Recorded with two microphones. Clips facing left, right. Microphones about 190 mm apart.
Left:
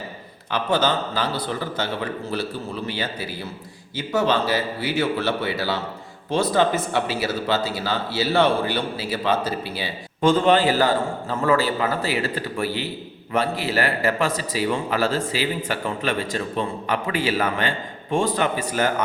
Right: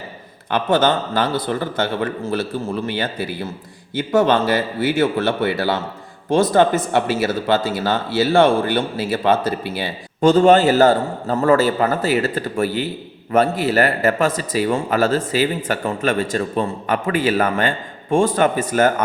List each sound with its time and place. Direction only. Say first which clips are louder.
0.5 s speech: right 5 dB; 50° right (ahead or behind)